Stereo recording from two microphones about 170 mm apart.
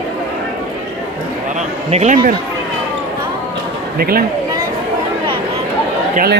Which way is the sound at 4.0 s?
60° right (ahead or behind).